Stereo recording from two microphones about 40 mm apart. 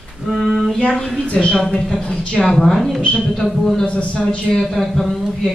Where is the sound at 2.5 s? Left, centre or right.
Centre.